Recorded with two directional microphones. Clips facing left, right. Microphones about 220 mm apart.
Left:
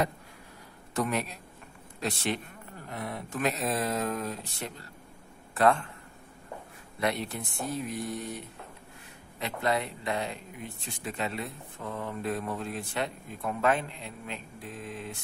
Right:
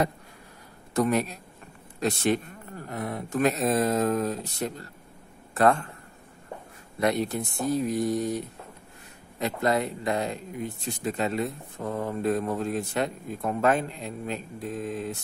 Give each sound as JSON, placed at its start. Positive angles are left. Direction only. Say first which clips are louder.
{"t": 0.9, "sound": "a man's voice", "louder": "right 6 dB", "side_deg": -40}
{"t": 7.0, "sound": "speech", "louder": "right 6 dB", "side_deg": -45}
{"t": 9.4, "sound": "speech", "louder": "right 5 dB", "side_deg": -45}